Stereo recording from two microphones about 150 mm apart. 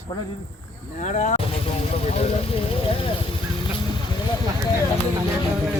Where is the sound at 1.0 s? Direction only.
55° left (ahead or behind).